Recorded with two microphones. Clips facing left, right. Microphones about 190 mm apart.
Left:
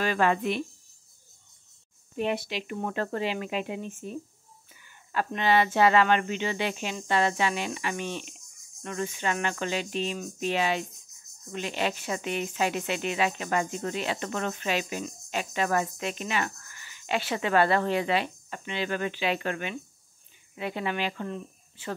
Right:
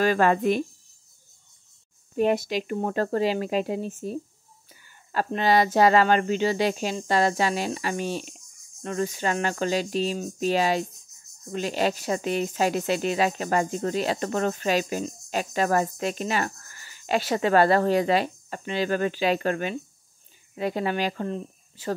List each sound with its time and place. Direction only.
0.0 s speech: 40° right (ahead or behind)
2.1 s speech: 45° right (ahead or behind)